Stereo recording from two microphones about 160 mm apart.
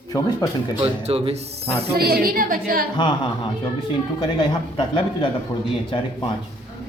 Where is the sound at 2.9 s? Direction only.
30° left (ahead or behind).